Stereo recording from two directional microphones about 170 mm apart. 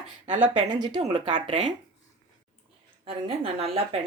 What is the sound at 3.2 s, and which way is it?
Speech, 30° right (ahead or behind).